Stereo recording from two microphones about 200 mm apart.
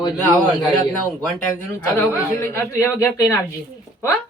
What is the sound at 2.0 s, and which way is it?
Speech, 10° left (ahead or behind).